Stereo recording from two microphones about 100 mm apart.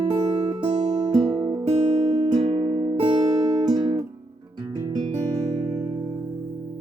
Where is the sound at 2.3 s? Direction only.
65° right (ahead or behind).